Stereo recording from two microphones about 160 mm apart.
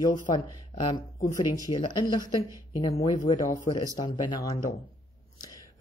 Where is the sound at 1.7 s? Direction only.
25° left (ahead or behind).